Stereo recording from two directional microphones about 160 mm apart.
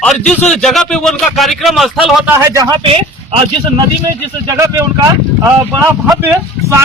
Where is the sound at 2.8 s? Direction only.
35° right (ahead or behind).